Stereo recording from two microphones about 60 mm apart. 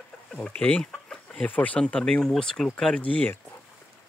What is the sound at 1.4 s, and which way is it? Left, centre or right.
Speech, left.